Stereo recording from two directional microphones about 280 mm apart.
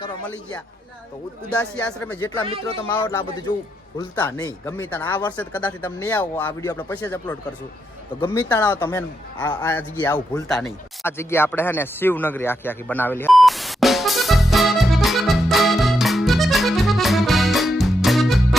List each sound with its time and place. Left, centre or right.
1.5 s speech: centre
8.2 s speech: centre
10.5 s a sound: centre